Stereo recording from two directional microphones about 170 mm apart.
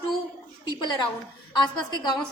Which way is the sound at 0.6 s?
25° left (ahead or behind).